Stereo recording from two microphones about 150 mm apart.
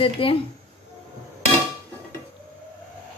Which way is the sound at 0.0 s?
35° left (ahead or behind).